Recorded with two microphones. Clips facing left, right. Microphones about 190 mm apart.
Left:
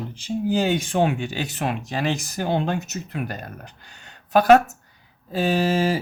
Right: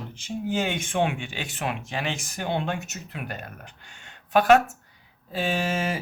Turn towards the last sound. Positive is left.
turn(degrees=35)  # may be behind; listen again after turning